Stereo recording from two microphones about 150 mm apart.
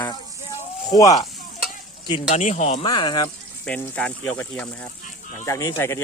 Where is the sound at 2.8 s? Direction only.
30° left (ahead or behind).